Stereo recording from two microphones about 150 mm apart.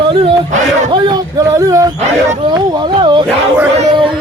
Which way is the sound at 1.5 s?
20° right (ahead or behind).